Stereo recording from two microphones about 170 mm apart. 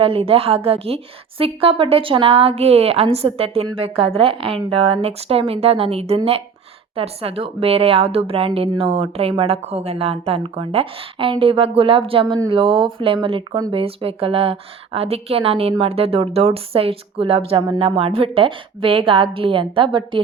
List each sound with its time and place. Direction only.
0.0 s a woman's voice: 35° right (ahead or behind)